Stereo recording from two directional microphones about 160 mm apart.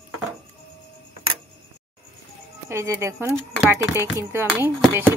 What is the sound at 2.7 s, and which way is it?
Speech, 15° right (ahead or behind).